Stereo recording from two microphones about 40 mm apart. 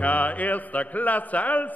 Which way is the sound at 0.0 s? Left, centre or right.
Left.